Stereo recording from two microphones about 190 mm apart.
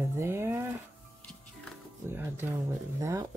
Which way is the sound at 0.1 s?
15° right (ahead or behind).